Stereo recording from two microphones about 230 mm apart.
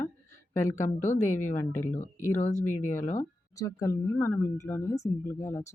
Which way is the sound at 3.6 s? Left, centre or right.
Centre.